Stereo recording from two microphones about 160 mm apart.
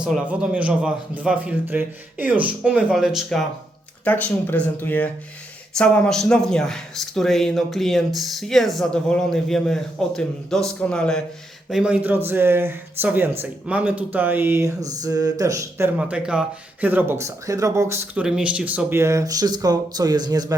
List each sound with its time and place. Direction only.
0.0 s speech: 5° right (ahead or behind)
4.0 s speech: 10° left (ahead or behind)
11.7 s speech: 5° right (ahead or behind)
16.0 s speech: 5° right (ahead or behind); by 20.6 s 25° right (ahead or behind)